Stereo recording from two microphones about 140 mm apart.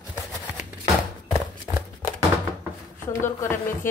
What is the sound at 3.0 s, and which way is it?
Speech, 15° left (ahead or behind).